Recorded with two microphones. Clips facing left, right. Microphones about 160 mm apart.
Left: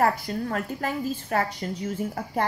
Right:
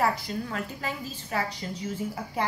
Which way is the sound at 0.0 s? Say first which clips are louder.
Left 3 dB; 50° left (ahead or behind).